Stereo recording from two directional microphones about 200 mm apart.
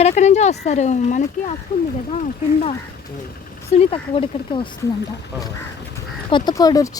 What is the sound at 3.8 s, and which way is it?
Speech, 30° left (ahead or behind).